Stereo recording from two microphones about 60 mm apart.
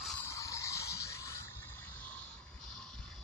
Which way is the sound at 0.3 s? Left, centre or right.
Left.